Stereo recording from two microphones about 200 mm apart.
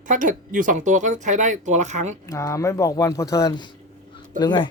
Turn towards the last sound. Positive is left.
turn(degrees=20)  # may be behind; listen again after turning